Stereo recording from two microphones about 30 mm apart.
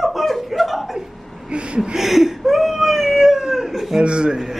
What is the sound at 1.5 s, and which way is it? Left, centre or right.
Gasp, right.